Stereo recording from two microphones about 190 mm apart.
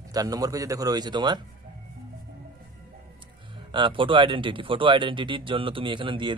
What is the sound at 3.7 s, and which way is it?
Speech, 25° right (ahead or behind).